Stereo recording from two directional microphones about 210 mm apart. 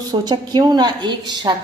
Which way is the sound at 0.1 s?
20° right (ahead or behind).